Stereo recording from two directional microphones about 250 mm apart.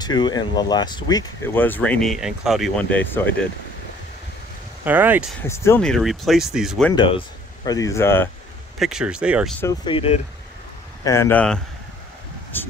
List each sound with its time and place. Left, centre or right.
0.0 s speech: centre
4.8 s speech: centre
5.4 s speech: centre
7.0 s speech: centre
8.7 s speech: centre
9.6 s speech: centre
11.1 s speech: centre